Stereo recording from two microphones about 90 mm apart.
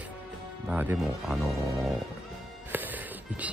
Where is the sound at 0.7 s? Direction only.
20° right (ahead or behind).